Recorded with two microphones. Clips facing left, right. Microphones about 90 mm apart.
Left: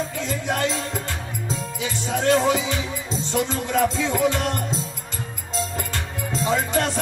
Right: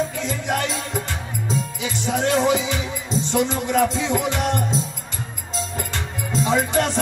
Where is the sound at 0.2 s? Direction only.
20° right (ahead or behind).